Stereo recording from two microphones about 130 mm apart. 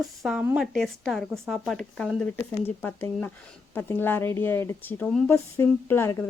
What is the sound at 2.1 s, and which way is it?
Speech, 15° left (ahead or behind).